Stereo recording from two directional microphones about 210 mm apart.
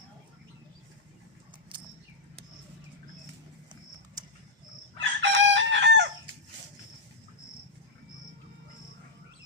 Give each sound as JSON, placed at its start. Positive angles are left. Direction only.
{"t": 4.9, "sound": "chicken", "side_deg": -60}